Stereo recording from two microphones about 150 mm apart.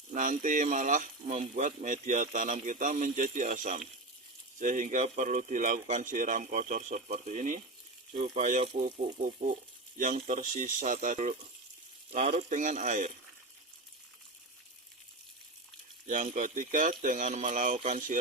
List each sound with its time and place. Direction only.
0.1 s speech: 60° right (ahead or behind)
9.4 s frying: 75° right (ahead or behind)
10.2 s speech: 55° right (ahead or behind)
16.0 s speech: 60° right (ahead or behind)